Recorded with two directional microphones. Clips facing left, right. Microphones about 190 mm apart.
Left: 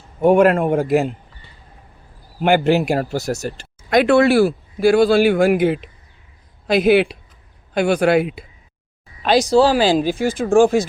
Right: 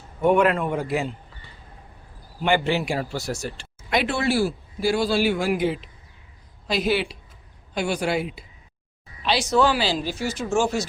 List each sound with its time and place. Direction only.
0.3 s speech: 45° left (ahead or behind)
2.4 s speech: 45° left (ahead or behind)
9.2 s speech: 45° left (ahead or behind)
9.5 s speech: 30° left (ahead or behind)
9.7 s speech: 50° left (ahead or behind)